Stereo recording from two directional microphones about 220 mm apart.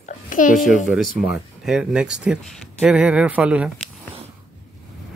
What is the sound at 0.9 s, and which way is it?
Speech, centre (ahead or behind).